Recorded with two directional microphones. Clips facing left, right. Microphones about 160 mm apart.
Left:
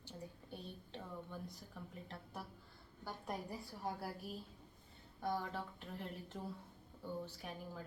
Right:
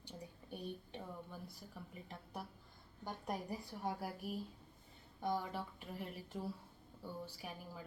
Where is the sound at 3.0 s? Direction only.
20° right (ahead or behind).